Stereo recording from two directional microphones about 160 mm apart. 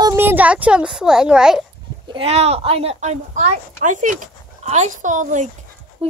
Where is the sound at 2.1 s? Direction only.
40° right (ahead or behind).